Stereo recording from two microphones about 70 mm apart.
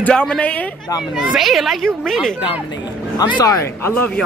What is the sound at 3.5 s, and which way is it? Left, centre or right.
Speech, left.